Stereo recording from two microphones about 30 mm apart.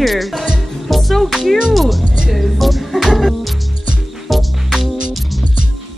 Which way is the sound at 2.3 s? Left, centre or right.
Centre.